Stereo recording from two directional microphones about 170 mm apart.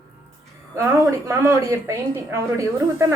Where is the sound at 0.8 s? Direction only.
15° right (ahead or behind).